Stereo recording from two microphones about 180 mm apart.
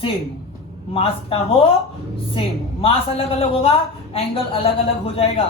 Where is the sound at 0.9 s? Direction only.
30° left (ahead or behind).